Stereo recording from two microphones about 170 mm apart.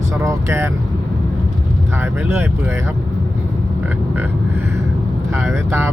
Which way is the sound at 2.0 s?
15° right (ahead or behind).